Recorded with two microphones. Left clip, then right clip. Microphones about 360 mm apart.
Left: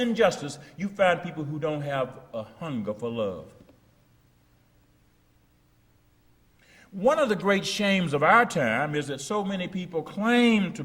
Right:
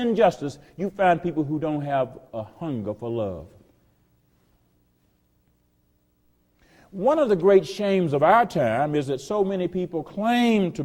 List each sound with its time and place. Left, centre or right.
0.0 s a man's voice: right
6.7 s a man's voice: right